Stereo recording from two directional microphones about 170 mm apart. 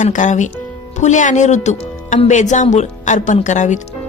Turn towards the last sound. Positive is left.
turn(degrees=45)  # may be behind; listen again after turning